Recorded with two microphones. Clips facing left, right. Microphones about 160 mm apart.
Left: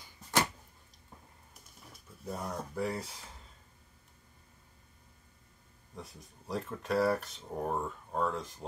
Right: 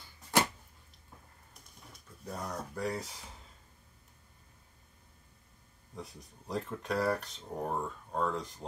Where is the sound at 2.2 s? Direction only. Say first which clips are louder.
Left 1 dB; 5° left (ahead or behind).